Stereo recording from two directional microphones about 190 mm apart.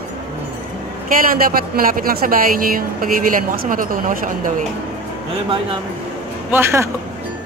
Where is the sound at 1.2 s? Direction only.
50° right (ahead or behind).